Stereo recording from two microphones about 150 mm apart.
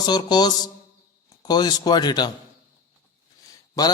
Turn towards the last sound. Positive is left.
turn(degrees=25)  # may be behind; listen again after turning